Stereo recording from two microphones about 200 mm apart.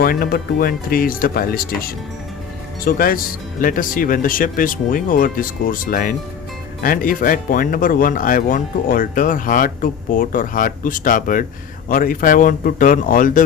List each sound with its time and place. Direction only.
0.0 s speech: 50° left (ahead or behind)